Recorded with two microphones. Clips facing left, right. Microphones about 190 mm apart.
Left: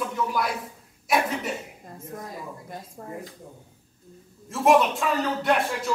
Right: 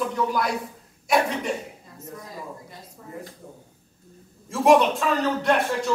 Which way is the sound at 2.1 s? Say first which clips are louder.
Even; 50° left (ahead or behind).